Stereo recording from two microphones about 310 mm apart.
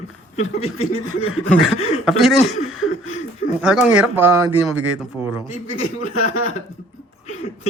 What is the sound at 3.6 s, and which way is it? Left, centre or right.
Speech, centre.